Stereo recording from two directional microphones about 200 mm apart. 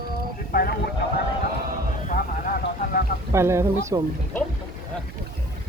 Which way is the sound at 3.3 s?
15° right (ahead or behind).